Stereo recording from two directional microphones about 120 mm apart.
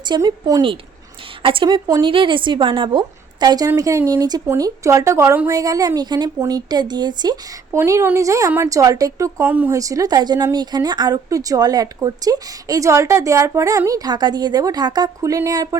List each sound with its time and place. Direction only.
0.2 s speech: 30° right (ahead or behind)
1.4 s speech: 45° right (ahead or behind)
3.4 s a woman's voice: 35° right (ahead or behind)
7.7 s a woman's voice: 25° right (ahead or behind)
9.7 s a woman's voice: 30° right (ahead or behind)